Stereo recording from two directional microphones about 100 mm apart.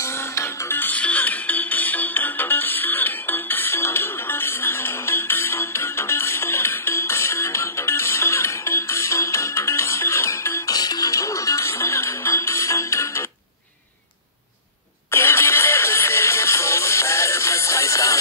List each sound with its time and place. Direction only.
0.0 s music: 25° left (ahead or behind)
10.7 s music: 40° left (ahead or behind)
15.0 s music: 25° left (ahead or behind)